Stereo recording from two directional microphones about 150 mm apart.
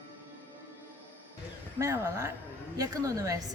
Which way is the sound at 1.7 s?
20° right (ahead or behind).